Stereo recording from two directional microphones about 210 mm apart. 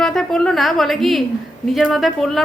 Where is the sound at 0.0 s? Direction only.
5° left (ahead or behind).